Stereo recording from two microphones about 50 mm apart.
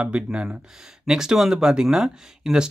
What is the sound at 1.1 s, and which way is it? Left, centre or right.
Speech, centre.